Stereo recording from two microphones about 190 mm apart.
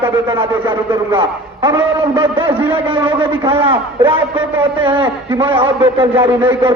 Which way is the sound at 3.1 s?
30° right (ahead or behind).